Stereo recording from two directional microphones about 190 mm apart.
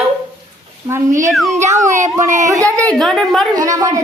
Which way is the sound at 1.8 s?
40° right (ahead or behind).